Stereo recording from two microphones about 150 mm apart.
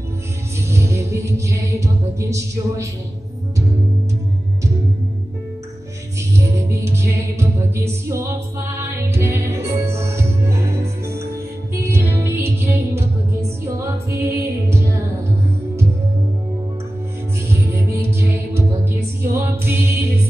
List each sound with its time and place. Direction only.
0.7 s music: 20° right (ahead or behind)
6.5 s music: 20° right (ahead or behind)
17.5 s music: 20° right (ahead or behind)